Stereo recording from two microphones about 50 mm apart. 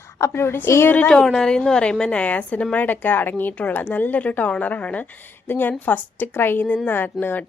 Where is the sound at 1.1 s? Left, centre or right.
Centre; by 5.0 s left.